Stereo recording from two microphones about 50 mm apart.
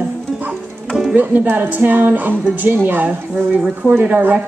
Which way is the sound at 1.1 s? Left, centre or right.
Right.